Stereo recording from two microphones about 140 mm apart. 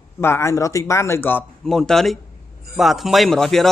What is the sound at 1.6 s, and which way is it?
A man's voice, 5° left (ahead or behind).